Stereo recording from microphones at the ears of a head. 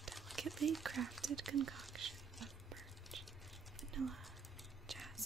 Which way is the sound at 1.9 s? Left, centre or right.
Right.